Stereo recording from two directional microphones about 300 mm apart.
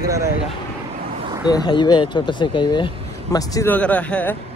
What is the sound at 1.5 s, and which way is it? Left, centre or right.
A man's voice, centre.